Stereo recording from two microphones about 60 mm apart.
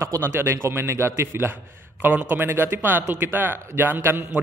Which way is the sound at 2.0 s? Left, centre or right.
Right.